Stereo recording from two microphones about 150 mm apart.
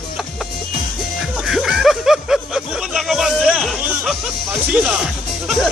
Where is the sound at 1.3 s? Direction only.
Centre (ahead or behind).